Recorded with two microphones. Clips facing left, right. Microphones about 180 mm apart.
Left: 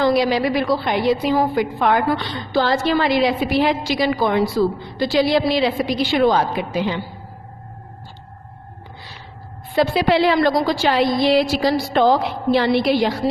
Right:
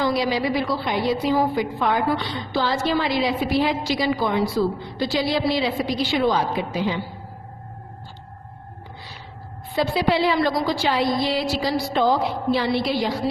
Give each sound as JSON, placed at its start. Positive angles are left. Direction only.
{"t": 0.0, "sound": "a woman's voice", "side_deg": 70}
{"t": 9.8, "sound": "a woman's voice", "side_deg": 70}